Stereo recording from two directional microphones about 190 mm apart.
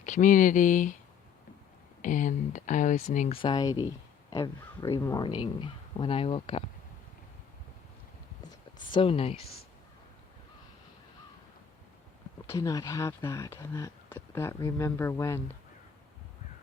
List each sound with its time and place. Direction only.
0.0 s speech: 40° left (ahead or behind)
2.0 s speech: 40° left (ahead or behind)
3.3 s speech: 25° left (ahead or behind)
8.9 s speech: 30° left (ahead or behind)
12.5 s speech: 15° left (ahead or behind)